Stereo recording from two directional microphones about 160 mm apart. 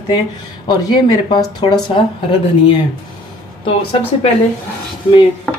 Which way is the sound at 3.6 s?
35° left (ahead or behind).